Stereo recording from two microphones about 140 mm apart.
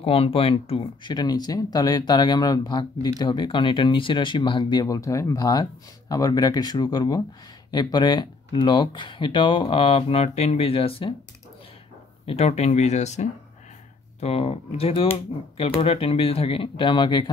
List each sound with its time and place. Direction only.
0.0 s speech: 40° left (ahead or behind)
12.3 s speech: 50° left (ahead or behind); by 17.3 s 35° left (ahead or behind)